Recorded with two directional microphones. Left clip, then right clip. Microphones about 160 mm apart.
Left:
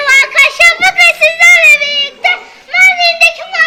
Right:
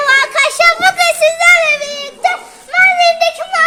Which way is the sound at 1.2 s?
25° right (ahead or behind).